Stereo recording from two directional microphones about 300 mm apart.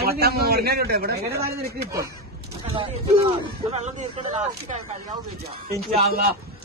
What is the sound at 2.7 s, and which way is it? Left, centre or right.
Speech, centre.